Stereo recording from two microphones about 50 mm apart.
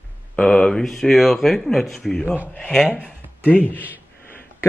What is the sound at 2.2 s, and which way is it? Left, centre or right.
Speech, right.